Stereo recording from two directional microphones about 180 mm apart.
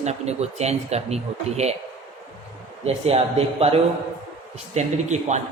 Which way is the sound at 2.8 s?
35° right (ahead or behind).